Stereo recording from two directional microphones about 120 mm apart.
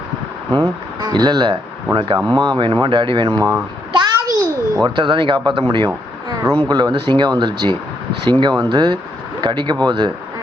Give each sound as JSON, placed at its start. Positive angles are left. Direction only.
{"t": 0.5, "sound": "speech", "side_deg": -35}
{"t": 2.1, "sound": "speech", "side_deg": -30}
{"t": 3.2, "sound": "speech", "side_deg": -30}
{"t": 3.9, "sound": "a sound", "side_deg": -30}
{"t": 4.8, "sound": "speech", "side_deg": -40}